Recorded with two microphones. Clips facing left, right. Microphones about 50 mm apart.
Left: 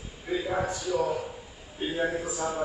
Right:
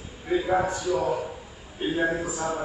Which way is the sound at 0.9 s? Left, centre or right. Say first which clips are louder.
Right 1 dB; centre.